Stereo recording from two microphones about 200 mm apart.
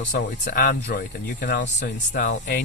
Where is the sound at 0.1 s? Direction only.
45° left (ahead or behind).